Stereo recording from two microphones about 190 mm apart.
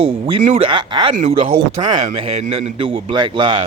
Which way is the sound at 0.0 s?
30° right (ahead or behind).